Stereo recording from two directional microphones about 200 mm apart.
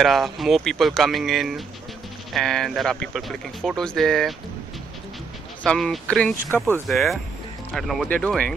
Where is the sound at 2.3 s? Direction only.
Centre (ahead or behind).